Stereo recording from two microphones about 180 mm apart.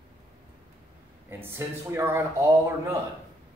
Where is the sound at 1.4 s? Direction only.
15° right (ahead or behind).